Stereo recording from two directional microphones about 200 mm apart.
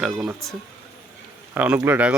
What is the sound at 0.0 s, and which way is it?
Speech, centre (ahead or behind).